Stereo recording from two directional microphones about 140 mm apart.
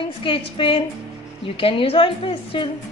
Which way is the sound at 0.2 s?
40° left (ahead or behind).